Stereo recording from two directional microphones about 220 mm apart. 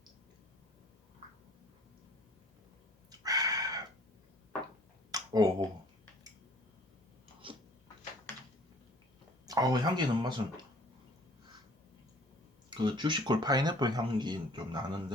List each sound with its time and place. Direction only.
3.1 s chicken: 15° right (ahead or behind)
5.1 s finger snapping: 15° right (ahead or behind)
9.5 s speech: 15° right (ahead or behind)
12.7 s speech: 20° right (ahead or behind)